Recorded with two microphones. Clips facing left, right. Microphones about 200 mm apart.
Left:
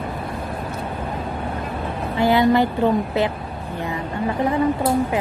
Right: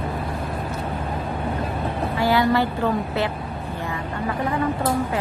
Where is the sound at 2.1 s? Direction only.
20° left (ahead or behind).